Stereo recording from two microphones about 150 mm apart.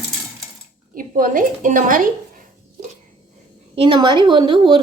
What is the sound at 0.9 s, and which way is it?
A woman's voice, 70° right (ahead or behind).